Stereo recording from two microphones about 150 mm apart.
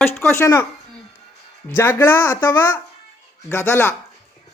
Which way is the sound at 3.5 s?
15° left (ahead or behind).